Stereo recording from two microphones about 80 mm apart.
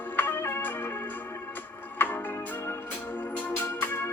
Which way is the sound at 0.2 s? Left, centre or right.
Left.